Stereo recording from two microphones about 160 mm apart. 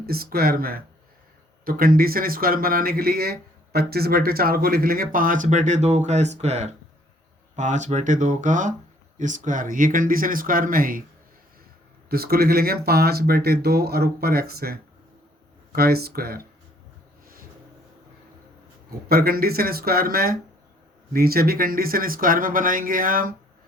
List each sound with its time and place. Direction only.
0.0 s speech: 70° right (ahead or behind)
12.0 s speech: 75° right (ahead or behind)
19.0 s speech: 70° right (ahead or behind)